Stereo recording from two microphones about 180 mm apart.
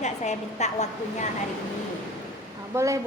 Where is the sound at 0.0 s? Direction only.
40° left (ahead or behind).